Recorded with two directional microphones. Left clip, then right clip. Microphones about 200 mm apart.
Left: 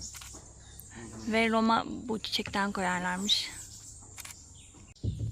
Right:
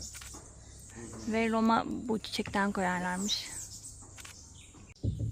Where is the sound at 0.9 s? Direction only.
Centre (ahead or behind).